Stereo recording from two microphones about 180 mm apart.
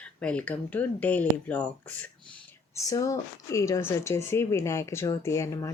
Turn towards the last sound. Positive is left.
turn(degrees=15)  # may be behind; listen again after turning